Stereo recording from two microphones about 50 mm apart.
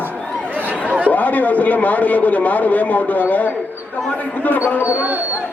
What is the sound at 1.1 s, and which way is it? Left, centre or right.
A man's voice, left.